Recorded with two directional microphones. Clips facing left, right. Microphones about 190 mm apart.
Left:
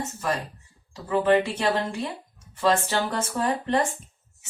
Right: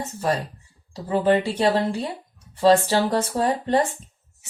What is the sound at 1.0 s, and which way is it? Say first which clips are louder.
Speech: right 1 dB; 30° right (ahead or behind).